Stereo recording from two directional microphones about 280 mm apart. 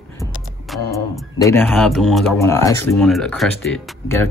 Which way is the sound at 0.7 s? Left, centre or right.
Centre.